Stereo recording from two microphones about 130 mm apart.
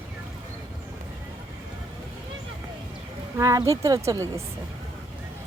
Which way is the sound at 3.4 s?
25° right (ahead or behind).